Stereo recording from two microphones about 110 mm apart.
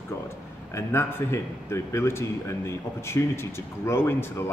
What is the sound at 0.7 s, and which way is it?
Speech, 25° left (ahead or behind).